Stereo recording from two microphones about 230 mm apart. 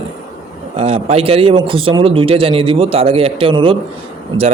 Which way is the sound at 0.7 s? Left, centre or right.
Right.